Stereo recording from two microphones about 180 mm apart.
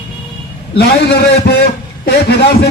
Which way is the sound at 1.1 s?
65° left (ahead or behind).